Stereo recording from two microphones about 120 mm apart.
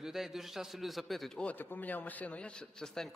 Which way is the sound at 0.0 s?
5° right (ahead or behind).